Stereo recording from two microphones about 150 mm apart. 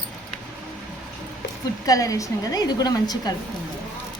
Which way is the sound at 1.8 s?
25° left (ahead or behind).